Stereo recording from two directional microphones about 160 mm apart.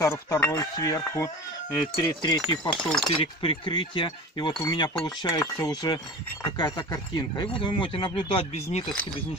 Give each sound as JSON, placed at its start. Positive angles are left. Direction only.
{"t": 0.0, "sound": "speech", "side_deg": 20}
{"t": 2.5, "sound": "speech", "side_deg": 30}
{"t": 2.8, "sound": "speech", "side_deg": 5}
{"t": 3.2, "sound": "speech", "side_deg": 35}